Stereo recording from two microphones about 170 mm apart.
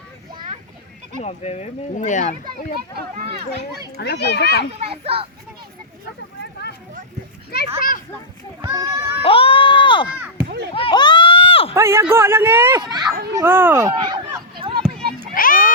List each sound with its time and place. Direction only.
0.3 s children playing: 30° right (ahead or behind)
1.2 s speech: 40° left (ahead or behind)
3.9 s a child's voice: 80° left
4.8 s a child's voice: 35° right (ahead or behind)
6.4 s a sound: 85° left
7.8 s a child's voice: 55° left (ahead or behind)
8.6 s a child's voice: 20° right (ahead or behind)
9.2 s a sound: 30° left (ahead or behind)
10.8 s run: 30° left (ahead or behind)
11.7 s speech: 15° right (ahead or behind)
12.8 s a child's voice: 25° right (ahead or behind)
13.3 s speech: 15° right (ahead or behind)
13.9 s a sound: 25° right (ahead or behind)
15.4 s a sound: 55° left (ahead or behind)